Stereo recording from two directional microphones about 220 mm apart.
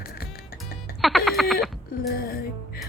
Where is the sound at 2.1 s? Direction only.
45° left (ahead or behind).